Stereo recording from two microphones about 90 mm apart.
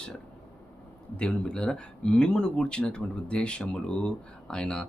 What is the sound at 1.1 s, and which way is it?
Speech, 10° left (ahead or behind).